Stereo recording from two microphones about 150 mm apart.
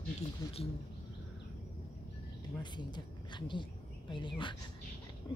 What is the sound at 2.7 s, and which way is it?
Speech, 30° left (ahead or behind).